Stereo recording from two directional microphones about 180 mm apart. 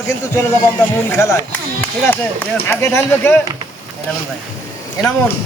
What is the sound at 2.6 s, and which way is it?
Speech, 15° left (ahead or behind).